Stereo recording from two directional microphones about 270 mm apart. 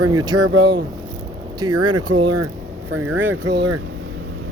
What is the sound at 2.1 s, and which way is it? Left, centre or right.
Speech, right.